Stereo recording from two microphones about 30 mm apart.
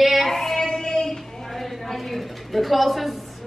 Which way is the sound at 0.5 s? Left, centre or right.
Left.